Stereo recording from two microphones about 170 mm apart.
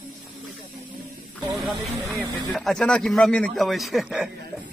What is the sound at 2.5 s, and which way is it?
A man's voice, centre (ahead or behind).